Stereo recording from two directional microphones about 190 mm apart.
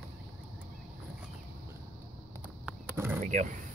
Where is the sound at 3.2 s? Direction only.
40° right (ahead or behind).